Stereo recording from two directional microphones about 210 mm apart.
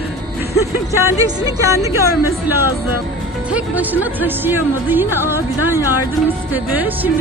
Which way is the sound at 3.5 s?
10° right (ahead or behind).